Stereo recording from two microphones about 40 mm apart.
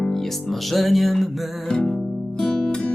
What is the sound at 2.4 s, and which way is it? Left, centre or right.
Music, centre.